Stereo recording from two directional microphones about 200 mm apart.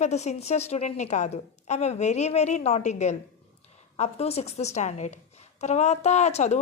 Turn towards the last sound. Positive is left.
turn(degrees=35)  # may be behind; listen again after turning